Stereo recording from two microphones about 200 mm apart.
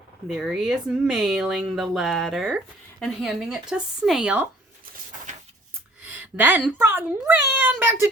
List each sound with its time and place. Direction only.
0.3 s speech: centre (ahead or behind)
5.3 s a sound: 40° right (ahead or behind)
6.1 s speech: 10° right (ahead or behind)